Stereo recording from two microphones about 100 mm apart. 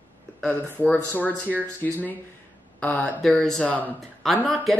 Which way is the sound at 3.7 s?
15° left (ahead or behind).